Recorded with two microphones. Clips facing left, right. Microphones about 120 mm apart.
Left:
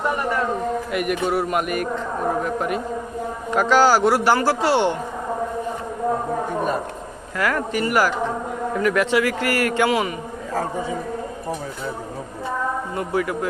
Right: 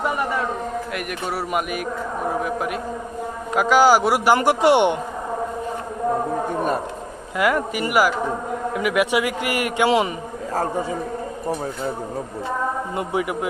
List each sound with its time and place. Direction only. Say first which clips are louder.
0.9 s a man's voice: left 5 dB; centre (ahead or behind); by 4.9 s 20° right (ahead or behind)
7.3 s a man's voice: right 2 dB; 15° right (ahead or behind)
13.0 s a man's voice: left 1 dB; 20° right (ahead or behind)